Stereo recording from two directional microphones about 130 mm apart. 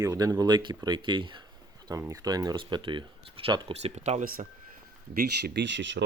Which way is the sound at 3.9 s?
60° right (ahead or behind).